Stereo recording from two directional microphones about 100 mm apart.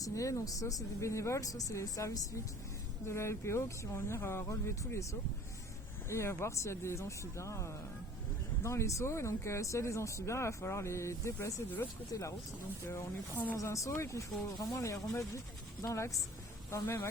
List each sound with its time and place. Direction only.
0.0 s speech: 30° left (ahead or behind)
6.1 s speech: 30° left (ahead or behind)
12.9 s speech: 25° left (ahead or behind)